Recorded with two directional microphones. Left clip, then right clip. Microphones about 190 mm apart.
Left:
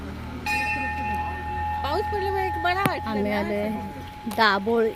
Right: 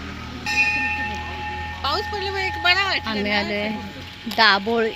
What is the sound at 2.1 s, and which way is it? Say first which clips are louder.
Speech: even; 50° left (ahead or behind).